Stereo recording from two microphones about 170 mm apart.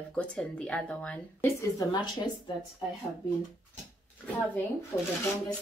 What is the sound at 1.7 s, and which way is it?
Speech, 25° left (ahead or behind).